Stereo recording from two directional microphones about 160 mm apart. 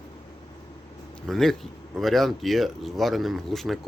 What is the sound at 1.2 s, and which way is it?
Speech, centre (ahead or behind).